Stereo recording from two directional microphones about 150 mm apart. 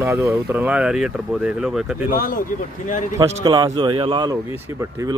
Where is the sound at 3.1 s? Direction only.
30° right (ahead or behind).